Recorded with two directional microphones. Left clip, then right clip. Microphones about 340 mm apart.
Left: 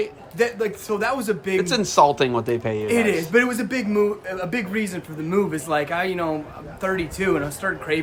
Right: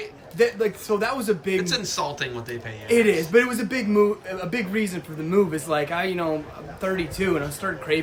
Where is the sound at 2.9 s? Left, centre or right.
Centre.